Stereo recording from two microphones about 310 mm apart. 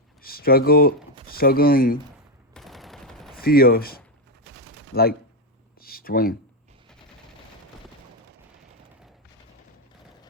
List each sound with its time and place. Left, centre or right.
0.2 s speech: left
2.5 s fusillade: centre
3.3 s speech: left
4.5 s gunshot: right
5.8 s a sound: left